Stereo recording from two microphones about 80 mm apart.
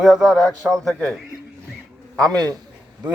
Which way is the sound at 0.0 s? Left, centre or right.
Centre.